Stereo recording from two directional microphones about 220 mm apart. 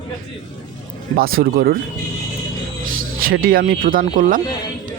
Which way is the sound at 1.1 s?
40° right (ahead or behind).